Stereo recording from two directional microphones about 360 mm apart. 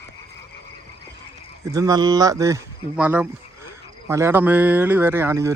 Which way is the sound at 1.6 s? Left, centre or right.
Centre.